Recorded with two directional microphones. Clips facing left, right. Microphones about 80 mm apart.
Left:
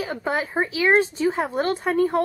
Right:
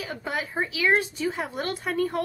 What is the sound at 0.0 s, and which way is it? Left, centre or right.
Speech, left.